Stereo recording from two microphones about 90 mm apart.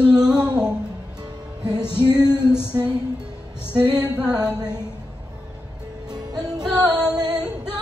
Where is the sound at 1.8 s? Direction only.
25° left (ahead or behind).